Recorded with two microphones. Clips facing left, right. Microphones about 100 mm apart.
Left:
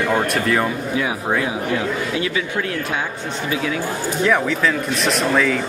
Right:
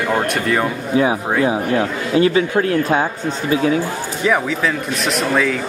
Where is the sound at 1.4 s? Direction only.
35° right (ahead or behind).